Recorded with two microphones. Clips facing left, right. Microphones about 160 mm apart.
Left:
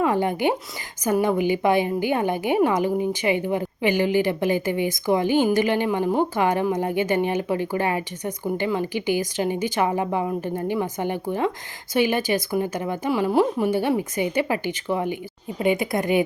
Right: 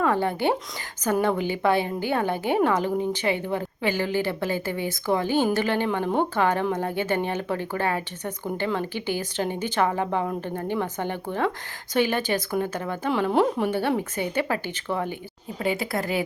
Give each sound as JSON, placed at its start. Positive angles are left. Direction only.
{"t": 0.0, "sound": "speech", "side_deg": 15}